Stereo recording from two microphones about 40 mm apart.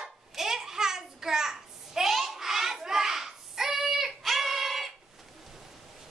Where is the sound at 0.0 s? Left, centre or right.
Centre.